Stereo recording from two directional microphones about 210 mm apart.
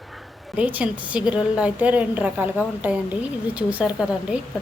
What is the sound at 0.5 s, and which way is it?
A woman's voice, 5° right (ahead or behind).